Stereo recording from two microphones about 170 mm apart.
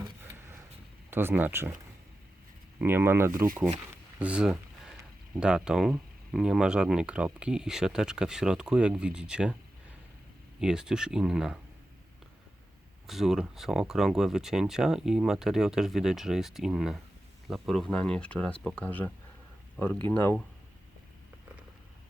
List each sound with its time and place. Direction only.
1.1 s speech: 15° right (ahead or behind)
2.7 s speech: 10° right (ahead or behind)
4.2 s a sound: 5° right (ahead or behind)
5.4 s speech: 5° right (ahead or behind)
10.6 s speech: 5° right (ahead or behind)
13.1 s speech: centre (ahead or behind)